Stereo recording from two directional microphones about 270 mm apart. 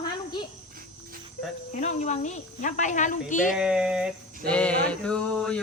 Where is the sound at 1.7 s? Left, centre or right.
Left.